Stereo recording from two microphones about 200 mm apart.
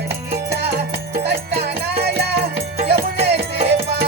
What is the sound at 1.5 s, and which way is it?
Music, 50° right (ahead or behind).